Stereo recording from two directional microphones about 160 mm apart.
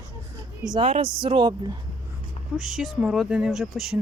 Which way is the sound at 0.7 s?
35° right (ahead or behind).